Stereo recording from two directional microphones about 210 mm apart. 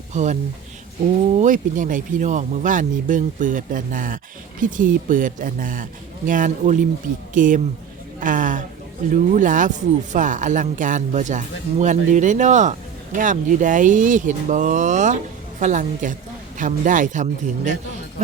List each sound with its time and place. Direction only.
0.1 s speech: 35° right (ahead or behind)